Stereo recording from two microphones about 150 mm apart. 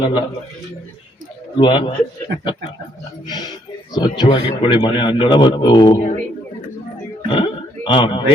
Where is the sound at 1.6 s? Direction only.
35° left (ahead or behind).